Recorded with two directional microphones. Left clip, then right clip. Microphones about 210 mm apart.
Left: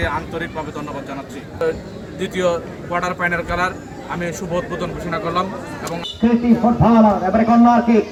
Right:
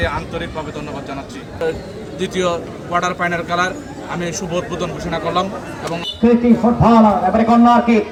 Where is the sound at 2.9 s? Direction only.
30° right (ahead or behind).